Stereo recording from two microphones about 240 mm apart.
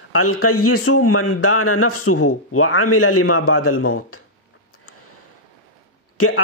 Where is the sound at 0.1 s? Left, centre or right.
Left.